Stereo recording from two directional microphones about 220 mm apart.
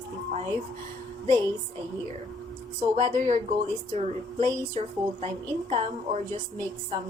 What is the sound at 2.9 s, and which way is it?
Speech, 35° right (ahead or behind).